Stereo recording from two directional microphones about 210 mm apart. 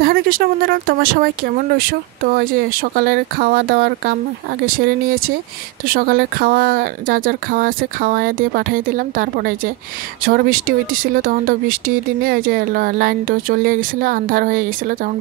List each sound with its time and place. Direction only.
0.0 s speech: 45° right (ahead or behind)